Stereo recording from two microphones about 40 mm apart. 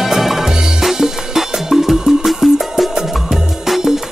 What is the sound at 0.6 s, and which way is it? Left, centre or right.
Music, centre.